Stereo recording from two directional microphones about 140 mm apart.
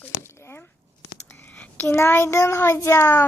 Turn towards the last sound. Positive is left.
turn(degrees=20)  # may be behind; listen again after turning